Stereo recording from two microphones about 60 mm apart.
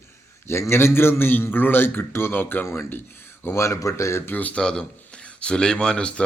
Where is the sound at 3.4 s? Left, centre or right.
Left.